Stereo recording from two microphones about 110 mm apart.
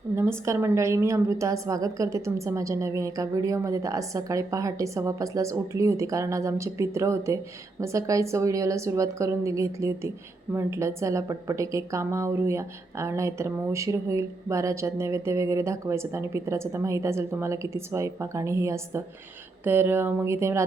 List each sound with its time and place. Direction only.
0.2 s a woman's voice: 25° right (ahead or behind)